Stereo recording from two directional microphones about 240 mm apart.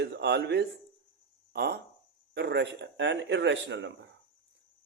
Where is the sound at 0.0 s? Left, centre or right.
Right.